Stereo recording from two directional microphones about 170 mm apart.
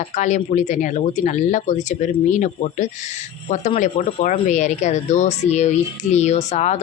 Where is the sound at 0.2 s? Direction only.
45° left (ahead or behind).